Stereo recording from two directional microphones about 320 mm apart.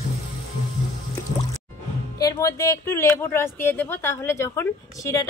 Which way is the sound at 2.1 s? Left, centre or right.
Centre.